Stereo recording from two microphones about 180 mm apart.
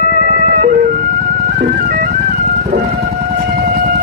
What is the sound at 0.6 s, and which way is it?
Emergency vehicle, 50° right (ahead or behind).